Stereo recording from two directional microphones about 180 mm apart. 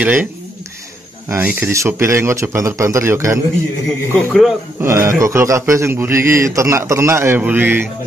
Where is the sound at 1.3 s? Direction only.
10° right (ahead or behind).